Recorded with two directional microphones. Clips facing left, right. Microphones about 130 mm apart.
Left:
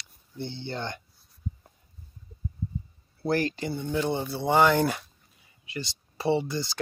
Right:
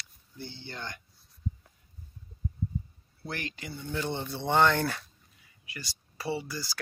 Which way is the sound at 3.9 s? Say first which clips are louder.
Left 4 dB; 15° left (ahead or behind).